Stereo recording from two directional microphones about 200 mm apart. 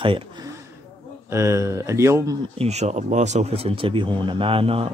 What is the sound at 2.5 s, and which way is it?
Speech, 30° right (ahead or behind).